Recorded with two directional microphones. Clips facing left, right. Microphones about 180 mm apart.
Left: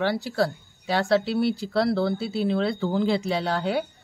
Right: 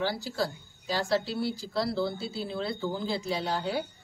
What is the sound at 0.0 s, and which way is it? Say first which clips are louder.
Speech: left 6 dB; 65° left (ahead or behind).